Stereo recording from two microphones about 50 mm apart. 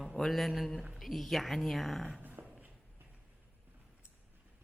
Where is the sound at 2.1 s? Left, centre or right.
Right.